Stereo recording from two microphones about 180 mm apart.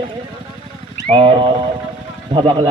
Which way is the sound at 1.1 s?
30° right (ahead or behind).